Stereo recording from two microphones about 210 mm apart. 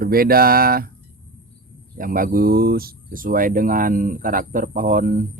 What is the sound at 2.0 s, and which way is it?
Speech, 40° right (ahead or behind).